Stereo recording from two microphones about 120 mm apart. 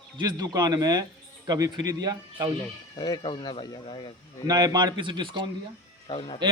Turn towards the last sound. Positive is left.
turn(degrees=50)  # may be behind; listen again after turning